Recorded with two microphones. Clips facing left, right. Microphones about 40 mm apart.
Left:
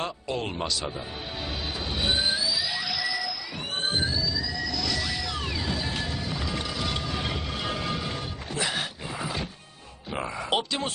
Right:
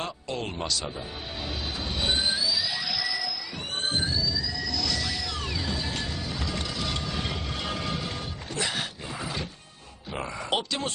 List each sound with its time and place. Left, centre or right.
0.0 s speech: centre
2.0 s train: centre
3.8 s a sound: centre